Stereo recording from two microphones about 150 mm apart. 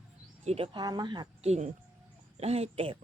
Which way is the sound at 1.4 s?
45° right (ahead or behind).